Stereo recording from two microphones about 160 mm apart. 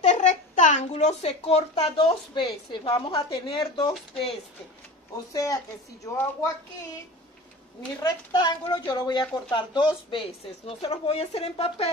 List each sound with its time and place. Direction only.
0.0 s a child's voice: 45° left (ahead or behind)
5.1 s speech: 20° left (ahead or behind)
8.0 s speech: 25° left (ahead or behind)